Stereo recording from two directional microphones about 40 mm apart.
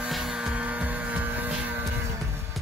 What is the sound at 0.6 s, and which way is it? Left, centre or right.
Vehicle, right.